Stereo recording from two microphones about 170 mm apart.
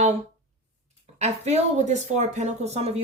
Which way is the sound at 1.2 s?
40° right (ahead or behind).